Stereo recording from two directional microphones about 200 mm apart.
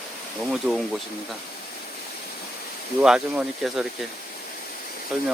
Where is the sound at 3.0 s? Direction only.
5° right (ahead or behind).